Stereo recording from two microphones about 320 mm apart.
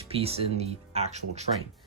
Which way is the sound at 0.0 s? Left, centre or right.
Centre.